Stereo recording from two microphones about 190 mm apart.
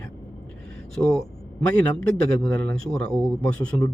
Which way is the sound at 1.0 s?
5° left (ahead or behind).